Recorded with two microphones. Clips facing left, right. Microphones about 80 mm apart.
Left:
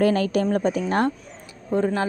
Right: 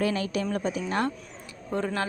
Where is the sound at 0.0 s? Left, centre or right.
Left.